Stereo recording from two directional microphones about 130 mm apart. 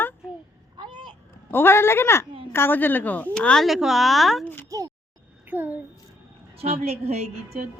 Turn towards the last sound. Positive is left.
turn(degrees=-55)  # may be behind; listen again after turning